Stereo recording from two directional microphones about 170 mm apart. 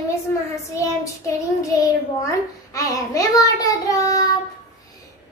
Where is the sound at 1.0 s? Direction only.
20° left (ahead or behind).